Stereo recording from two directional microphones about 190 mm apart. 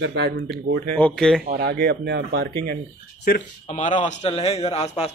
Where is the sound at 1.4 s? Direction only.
55° right (ahead or behind).